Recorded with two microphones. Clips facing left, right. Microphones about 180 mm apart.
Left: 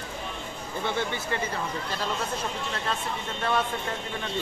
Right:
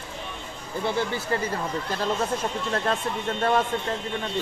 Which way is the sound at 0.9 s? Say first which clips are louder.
Right 3 dB; 35° right (ahead or behind).